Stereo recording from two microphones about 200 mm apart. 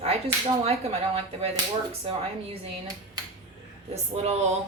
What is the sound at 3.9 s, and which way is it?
Speech, 30° right (ahead or behind).